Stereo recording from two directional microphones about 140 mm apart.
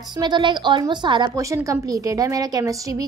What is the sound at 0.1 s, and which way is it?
A woman's voice, 30° right (ahead or behind).